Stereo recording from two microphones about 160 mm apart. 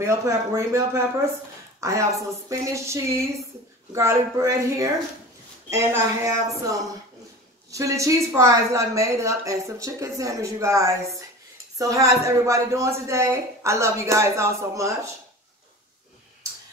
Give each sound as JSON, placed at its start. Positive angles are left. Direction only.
{"t": 0.0, "sound": "a woman's voice", "side_deg": -20}